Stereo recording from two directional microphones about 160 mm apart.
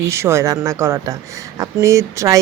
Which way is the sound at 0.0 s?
15° right (ahead or behind).